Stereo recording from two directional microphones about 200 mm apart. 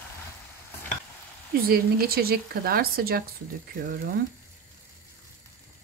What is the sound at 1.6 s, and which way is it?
Speech, 50° right (ahead or behind).